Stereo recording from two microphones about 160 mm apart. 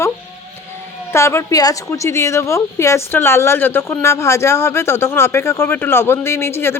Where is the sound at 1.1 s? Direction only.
15° left (ahead or behind).